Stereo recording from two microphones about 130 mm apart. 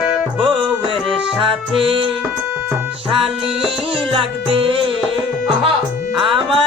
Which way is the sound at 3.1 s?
45° right (ahead or behind).